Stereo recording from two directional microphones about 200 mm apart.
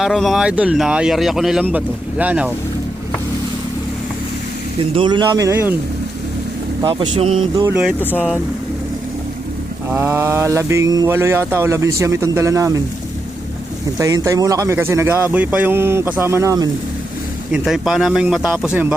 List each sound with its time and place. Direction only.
0.0 s speech: centre (ahead or behind)
4.8 s speech: 25° right (ahead or behind)
6.8 s speech: 25° right (ahead or behind)
7.5 s speech: 15° right (ahead or behind)
9.9 s speech: 10° right (ahead or behind)
14.0 s speech: 15° right (ahead or behind)
17.5 s speech: centre (ahead or behind)